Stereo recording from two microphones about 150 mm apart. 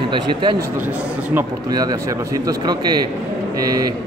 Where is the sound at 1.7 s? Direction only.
25° right (ahead or behind).